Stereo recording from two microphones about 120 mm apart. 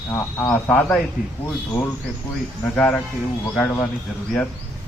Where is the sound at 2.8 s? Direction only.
10° left (ahead or behind).